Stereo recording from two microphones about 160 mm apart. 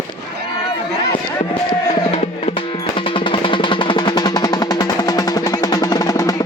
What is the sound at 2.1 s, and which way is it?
Music, 40° left (ahead or behind).